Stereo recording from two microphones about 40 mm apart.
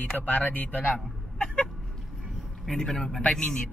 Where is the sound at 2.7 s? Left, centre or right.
Centre.